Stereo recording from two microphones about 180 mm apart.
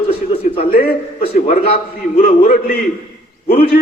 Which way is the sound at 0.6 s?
55° left (ahead or behind).